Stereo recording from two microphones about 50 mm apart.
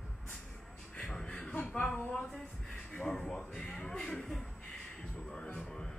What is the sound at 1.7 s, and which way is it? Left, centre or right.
Speech, left.